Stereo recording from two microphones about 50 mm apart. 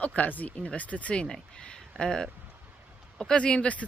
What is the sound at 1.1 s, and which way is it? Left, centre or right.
Speech, centre.